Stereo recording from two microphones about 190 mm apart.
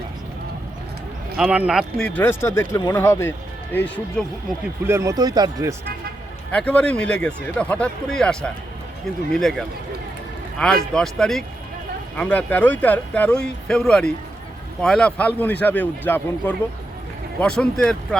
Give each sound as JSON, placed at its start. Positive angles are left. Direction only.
{"t": 1.4, "sound": "speech", "side_deg": -5}
{"t": 4.9, "sound": "speech", "side_deg": -15}
{"t": 6.5, "sound": "speech", "side_deg": 5}